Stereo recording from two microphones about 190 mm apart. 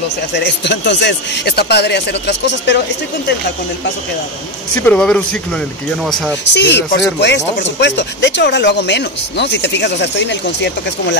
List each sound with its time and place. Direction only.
0.4 s speech: 65° left (ahead or behind)
4.8 s speech: 5° left (ahead or behind)
6.5 s speech: 65° left (ahead or behind)